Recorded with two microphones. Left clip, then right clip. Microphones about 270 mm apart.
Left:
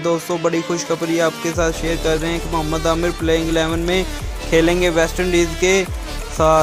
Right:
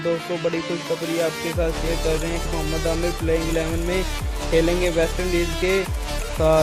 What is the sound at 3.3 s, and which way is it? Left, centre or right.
Speech, centre.